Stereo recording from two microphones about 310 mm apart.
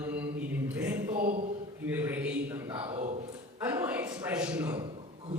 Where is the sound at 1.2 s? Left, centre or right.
Right.